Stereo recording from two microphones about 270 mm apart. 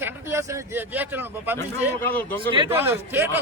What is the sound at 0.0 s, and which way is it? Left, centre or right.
Speech, centre.